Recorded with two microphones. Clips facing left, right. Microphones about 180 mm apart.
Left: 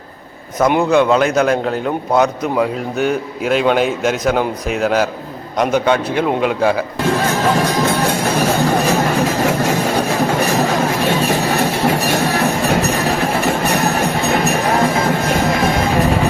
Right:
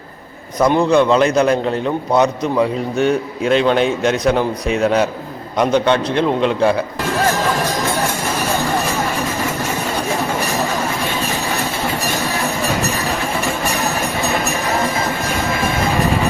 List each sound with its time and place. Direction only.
0.8 s a man's voice: 5° left (ahead or behind)
8.9 s a sound: 70° left (ahead or behind)
12.4 s music: 60° left (ahead or behind)